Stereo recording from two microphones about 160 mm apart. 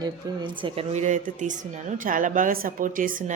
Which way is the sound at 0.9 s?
50° right (ahead or behind).